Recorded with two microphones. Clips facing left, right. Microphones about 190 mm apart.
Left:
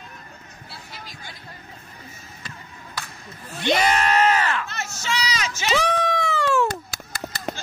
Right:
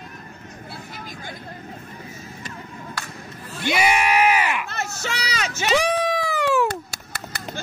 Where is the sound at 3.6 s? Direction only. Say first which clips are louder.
Even; 10° right (ahead or behind).